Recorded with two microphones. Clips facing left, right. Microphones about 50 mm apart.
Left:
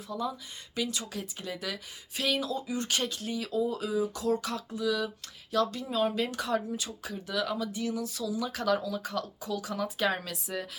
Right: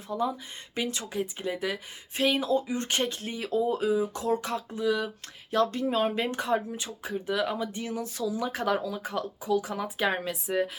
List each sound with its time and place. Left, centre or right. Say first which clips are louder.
0.1 s speech: right 5 dB; right